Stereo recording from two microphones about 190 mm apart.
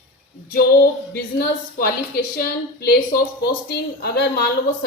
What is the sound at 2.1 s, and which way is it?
A woman's voice, 50° left (ahead or behind).